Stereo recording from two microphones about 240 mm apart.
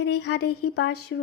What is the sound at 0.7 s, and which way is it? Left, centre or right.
Speech, left.